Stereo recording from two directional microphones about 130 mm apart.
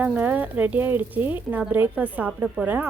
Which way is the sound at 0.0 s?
15° right (ahead or behind).